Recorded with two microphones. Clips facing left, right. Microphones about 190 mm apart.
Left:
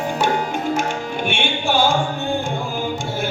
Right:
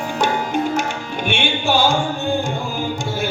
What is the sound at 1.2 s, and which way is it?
Music, 50° left (ahead or behind).